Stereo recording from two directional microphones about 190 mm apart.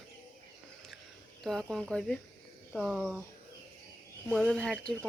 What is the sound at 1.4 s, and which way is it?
Speech, centre (ahead or behind).